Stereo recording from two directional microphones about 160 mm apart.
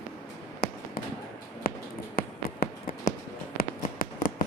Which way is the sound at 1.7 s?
65° left (ahead or behind).